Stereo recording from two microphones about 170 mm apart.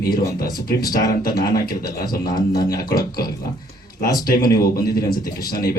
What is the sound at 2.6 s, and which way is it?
Speech, 60° left (ahead or behind).